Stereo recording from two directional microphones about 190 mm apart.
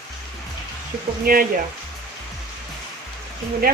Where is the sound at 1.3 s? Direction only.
50° right (ahead or behind).